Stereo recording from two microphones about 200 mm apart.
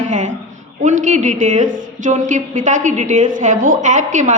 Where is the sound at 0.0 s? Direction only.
40° right (ahead or behind).